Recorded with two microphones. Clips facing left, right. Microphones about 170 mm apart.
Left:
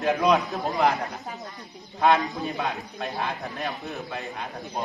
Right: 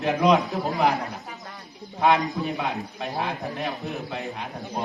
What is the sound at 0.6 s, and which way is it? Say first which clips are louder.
Speech: even; 20° right (ahead or behind).